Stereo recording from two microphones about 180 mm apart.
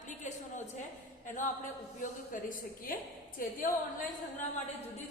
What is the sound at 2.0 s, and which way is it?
A woman's voice, 45° left (ahead or behind).